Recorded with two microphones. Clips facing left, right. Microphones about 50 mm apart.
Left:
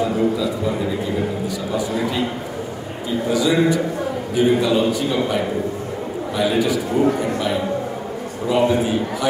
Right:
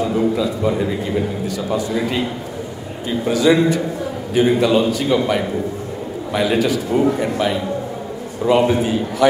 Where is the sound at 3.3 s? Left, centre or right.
Right.